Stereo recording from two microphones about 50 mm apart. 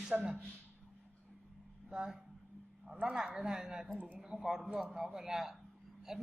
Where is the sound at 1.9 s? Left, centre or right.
Centre.